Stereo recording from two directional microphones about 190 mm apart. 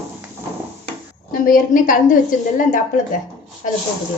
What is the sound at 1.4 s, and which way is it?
A woman's voice, 45° left (ahead or behind).